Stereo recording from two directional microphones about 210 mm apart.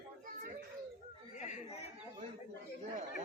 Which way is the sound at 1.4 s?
35° left (ahead or behind).